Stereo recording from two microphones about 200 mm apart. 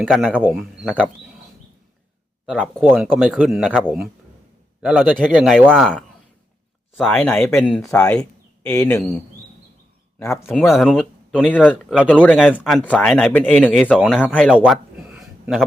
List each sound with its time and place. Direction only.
0.0 s speech: 5° right (ahead or behind)
2.5 s a man's voice: centre (ahead or behind)
6.9 s speech: 5° left (ahead or behind)
8.2 s a sound: 15° left (ahead or behind)
10.2 s speech: 10° left (ahead or behind)
10.5 s speech: centre (ahead or behind)
14.5 s a sound: 5° right (ahead or behind)